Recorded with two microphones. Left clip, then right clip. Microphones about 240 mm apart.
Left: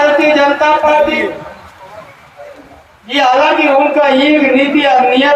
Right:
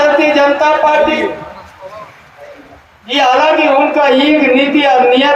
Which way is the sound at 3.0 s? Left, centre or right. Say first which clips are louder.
Even; right.